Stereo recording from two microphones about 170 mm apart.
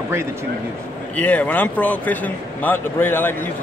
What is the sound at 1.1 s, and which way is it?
Speech, 10° left (ahead or behind).